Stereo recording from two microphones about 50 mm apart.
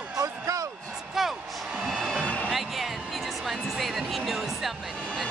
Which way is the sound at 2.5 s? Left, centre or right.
Centre.